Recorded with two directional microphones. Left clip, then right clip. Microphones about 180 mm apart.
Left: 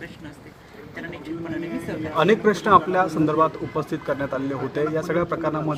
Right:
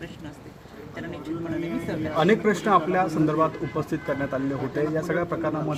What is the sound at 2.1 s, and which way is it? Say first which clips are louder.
A man's voice: left 3 dB; 40° left (ahead or behind).